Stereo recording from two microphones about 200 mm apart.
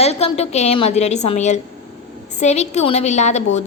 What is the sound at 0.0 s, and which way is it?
A woman's voice, 30° left (ahead or behind).